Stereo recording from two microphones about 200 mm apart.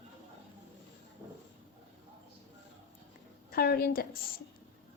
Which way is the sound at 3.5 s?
50° left (ahead or behind).